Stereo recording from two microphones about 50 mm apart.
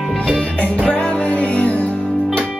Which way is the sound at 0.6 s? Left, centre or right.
Left.